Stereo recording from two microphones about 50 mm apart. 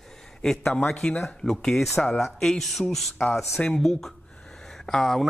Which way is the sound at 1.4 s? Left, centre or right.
Centre.